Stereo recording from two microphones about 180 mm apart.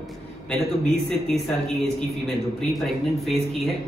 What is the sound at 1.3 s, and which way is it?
Speech, 5° left (ahead or behind).